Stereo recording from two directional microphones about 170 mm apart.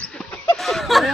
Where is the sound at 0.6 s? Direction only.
Centre (ahead or behind).